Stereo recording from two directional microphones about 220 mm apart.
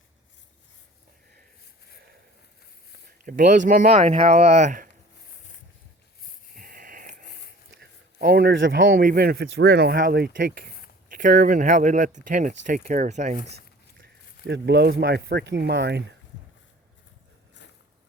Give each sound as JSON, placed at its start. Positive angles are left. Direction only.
{"t": 3.2, "sound": "speech", "side_deg": -35}
{"t": 6.5, "sound": "a sound", "side_deg": -40}
{"t": 7.8, "sound": "speech", "side_deg": -45}
{"t": 9.0, "sound": "speech", "side_deg": -40}
{"t": 14.0, "sound": "speech", "side_deg": -50}